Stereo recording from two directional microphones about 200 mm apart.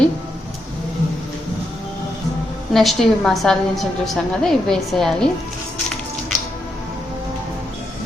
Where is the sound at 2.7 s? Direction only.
Centre (ahead or behind).